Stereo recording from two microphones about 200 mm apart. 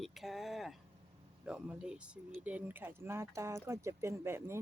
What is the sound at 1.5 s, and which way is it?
Speech, 5° right (ahead or behind).